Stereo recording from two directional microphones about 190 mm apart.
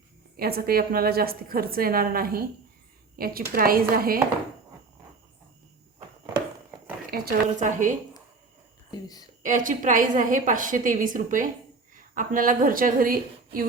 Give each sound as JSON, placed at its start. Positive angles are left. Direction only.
{"t": 0.3, "sound": "a woman's voice", "side_deg": -55}
{"t": 7.1, "sound": "a woman's voice", "side_deg": -50}
{"t": 8.9, "sound": "speech", "side_deg": 20}
{"t": 9.4, "sound": "a woman's voice", "side_deg": -45}